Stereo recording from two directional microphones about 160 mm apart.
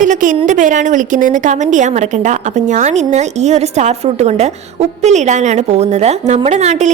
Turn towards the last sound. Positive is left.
turn(degrees=-45)  # may be behind; listen again after turning